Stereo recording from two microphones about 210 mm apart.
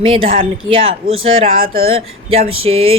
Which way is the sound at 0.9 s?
70° right (ahead or behind).